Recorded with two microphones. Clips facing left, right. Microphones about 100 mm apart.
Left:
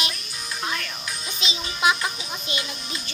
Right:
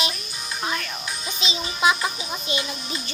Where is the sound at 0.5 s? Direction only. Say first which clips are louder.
Right 2 dB; 15° right (ahead or behind).